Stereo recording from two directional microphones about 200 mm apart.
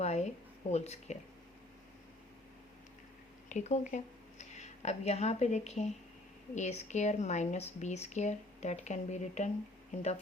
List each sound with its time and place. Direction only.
0.0 s a sound: 35° left (ahead or behind)
0.7 s speech: 35° left (ahead or behind)
3.5 s speech: 35° left (ahead or behind)